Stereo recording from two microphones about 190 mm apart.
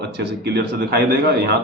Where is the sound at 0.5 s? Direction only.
55° right (ahead or behind).